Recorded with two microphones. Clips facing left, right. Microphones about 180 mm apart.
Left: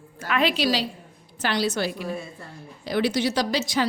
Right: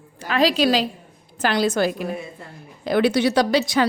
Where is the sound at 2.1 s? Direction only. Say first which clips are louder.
Right 2 dB; 20° right (ahead or behind).